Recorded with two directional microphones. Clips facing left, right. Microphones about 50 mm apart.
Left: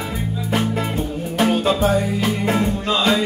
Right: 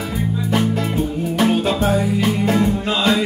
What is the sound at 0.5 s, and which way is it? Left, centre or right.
Music, centre.